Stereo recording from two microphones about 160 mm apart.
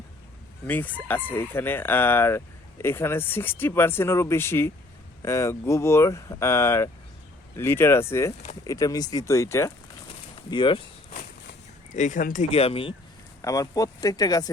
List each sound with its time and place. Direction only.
0.7 s speech: 10° left (ahead or behind)
10.5 s speech: 30° left (ahead or behind)
11.9 s speech: 50° left (ahead or behind)
12.5 s speech: 40° left (ahead or behind)
13.4 s speech: 20° left (ahead or behind)